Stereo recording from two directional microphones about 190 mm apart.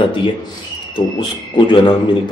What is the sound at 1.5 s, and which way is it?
Speech, 25° left (ahead or behind).